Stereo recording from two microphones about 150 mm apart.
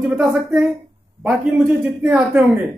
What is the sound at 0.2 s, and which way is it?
A man's voice, 5° right (ahead or behind).